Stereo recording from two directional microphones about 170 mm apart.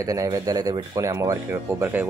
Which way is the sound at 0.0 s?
20° right (ahead or behind).